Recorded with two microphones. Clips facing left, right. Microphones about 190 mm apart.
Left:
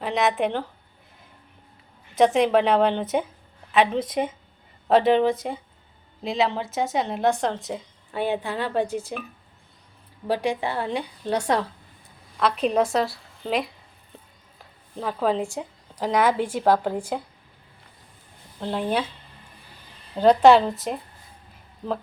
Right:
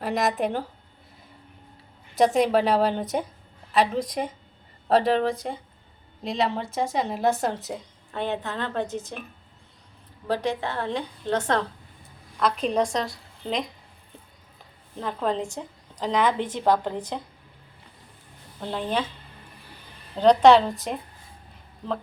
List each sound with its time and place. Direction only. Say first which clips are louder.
0.0 s a woman's voice: left 2 dB; centre (ahead or behind)
2.1 s a woman's voice: left 2 dB; centre (ahead or behind)
8.1 s a woman's voice: left 3 dB; 10° left (ahead or behind)
10.2 s a woman's voice: left 2 dB; 10° left (ahead or behind)
14.9 s a woman's voice: left 3 dB; 5° left (ahead or behind)
18.6 s a woman's voice: left 2 dB; 5° left (ahead or behind)
20.1 s a woman's voice: left 1 dB; 5° left (ahead or behind)